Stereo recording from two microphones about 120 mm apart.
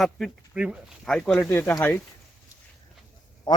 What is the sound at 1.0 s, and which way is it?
Speech, 10° left (ahead or behind).